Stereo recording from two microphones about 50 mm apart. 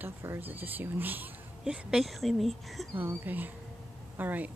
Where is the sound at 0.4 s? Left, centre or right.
Right.